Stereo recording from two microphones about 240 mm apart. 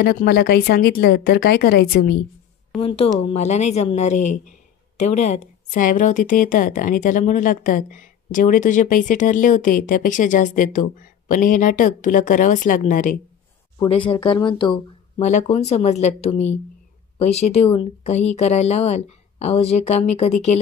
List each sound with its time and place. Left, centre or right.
0.0 s speech: left
2.8 s speech: left
13.7 s speech: centre